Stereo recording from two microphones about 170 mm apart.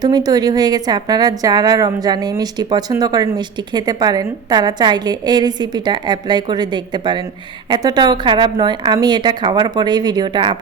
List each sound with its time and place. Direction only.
0.0 s a woman's voice: 25° right (ahead or behind)